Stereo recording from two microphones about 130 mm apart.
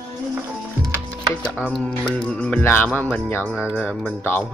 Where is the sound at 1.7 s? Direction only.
5° left (ahead or behind).